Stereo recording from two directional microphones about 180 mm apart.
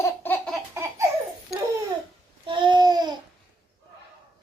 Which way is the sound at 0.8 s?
15° right (ahead or behind).